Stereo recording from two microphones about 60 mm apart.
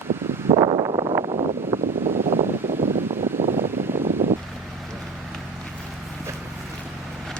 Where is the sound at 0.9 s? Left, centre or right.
Right.